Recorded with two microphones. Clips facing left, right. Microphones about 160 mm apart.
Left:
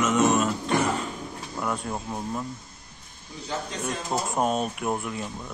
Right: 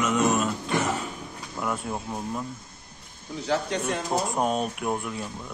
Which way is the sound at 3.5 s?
70° right (ahead or behind).